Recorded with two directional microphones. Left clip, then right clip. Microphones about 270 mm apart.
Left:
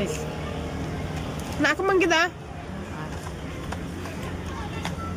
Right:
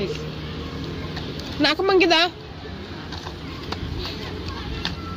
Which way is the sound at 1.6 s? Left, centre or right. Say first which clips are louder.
Right 3 dB; centre.